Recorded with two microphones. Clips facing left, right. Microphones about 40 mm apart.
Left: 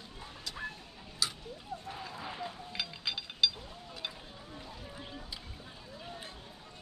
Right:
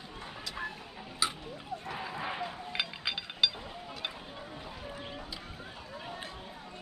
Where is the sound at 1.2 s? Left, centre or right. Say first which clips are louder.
Right 3 dB; right.